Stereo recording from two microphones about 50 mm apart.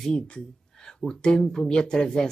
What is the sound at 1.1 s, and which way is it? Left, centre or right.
Speech, centre.